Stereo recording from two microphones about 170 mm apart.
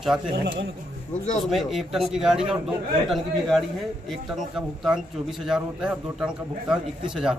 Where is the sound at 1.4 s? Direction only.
Centre (ahead or behind).